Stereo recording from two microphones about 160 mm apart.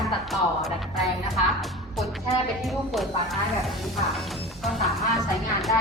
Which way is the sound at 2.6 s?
Centre (ahead or behind).